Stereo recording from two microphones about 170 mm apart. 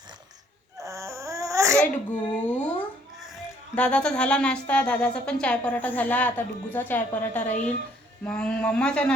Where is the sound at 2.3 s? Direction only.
10° left (ahead or behind).